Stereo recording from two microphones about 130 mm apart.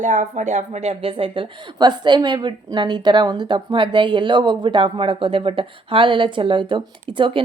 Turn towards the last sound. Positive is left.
turn(degrees=-45)  # may be behind; listen again after turning